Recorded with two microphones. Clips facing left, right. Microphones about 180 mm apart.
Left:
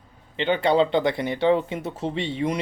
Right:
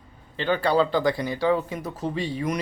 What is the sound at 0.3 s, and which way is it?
Speech, 20° left (ahead or behind).